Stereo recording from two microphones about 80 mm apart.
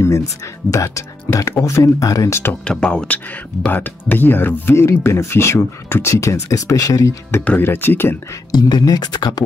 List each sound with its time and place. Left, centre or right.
0.7 s speech: left
2.6 s speech: centre
3.6 s speech: left
7.4 s speech: left
8.5 s speech: left